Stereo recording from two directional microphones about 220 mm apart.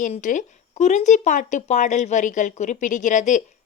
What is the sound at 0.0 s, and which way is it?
A woman's voice, 35° left (ahead or behind).